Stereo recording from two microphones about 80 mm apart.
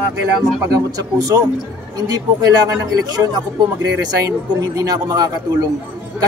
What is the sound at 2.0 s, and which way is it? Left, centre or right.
Speech, right.